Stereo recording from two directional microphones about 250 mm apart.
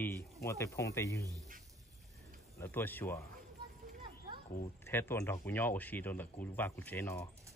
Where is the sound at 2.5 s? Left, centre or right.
Centre.